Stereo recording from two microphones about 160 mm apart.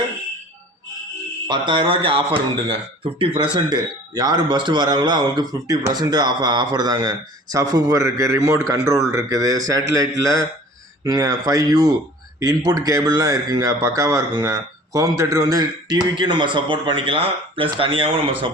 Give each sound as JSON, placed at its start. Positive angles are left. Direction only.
{"t": 1.5, "sound": "speech", "side_deg": -30}